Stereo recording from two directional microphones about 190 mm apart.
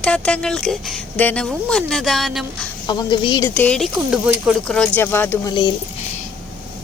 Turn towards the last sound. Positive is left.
turn(degrees=10)  # may be behind; listen again after turning